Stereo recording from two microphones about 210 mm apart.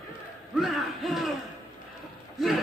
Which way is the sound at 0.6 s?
Centre (ahead or behind).